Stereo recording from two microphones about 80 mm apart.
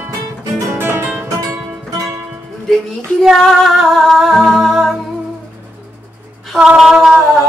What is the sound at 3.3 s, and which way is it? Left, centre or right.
Music, centre.